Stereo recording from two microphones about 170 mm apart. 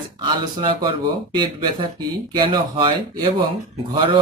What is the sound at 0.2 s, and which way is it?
A man's voice, 30° right (ahead or behind).